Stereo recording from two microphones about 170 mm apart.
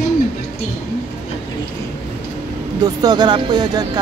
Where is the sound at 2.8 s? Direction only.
25° right (ahead or behind).